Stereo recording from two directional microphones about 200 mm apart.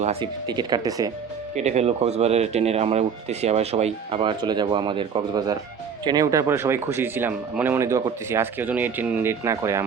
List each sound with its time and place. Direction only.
0.0 s speech: 30° right (ahead or behind)
1.5 s speech: 35° right (ahead or behind); by 9.8 s 15° right (ahead or behind)